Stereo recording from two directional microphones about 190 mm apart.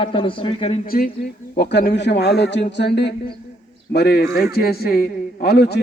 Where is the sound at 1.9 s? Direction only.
60° left (ahead or behind).